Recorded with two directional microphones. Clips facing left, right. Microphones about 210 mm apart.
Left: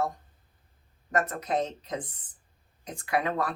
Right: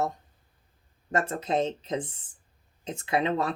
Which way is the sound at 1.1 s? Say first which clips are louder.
Right 1 dB; 25° right (ahead or behind).